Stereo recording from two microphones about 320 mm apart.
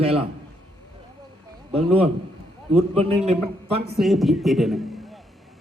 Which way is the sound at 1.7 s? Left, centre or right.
Centre.